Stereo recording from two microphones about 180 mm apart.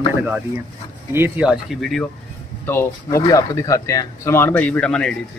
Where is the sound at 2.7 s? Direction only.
15° left (ahead or behind).